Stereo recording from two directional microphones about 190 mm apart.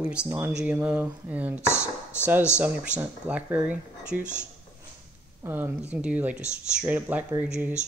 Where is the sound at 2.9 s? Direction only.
10° right (ahead or behind).